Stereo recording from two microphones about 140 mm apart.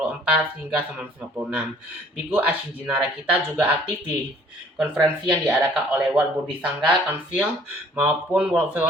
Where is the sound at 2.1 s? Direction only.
5° right (ahead or behind).